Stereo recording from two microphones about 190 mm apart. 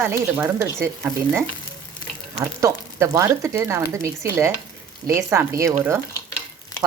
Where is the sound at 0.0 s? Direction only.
10° right (ahead or behind).